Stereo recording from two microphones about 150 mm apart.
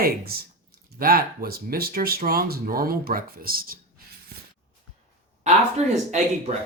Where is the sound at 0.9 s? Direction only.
75° right (ahead or behind).